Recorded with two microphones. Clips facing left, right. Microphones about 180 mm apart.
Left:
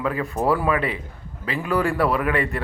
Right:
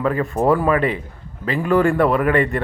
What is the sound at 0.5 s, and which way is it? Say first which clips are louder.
Speech: right 4 dB; 45° right (ahead or behind).